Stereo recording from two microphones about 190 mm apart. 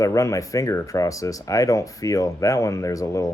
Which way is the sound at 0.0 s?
15° left (ahead or behind).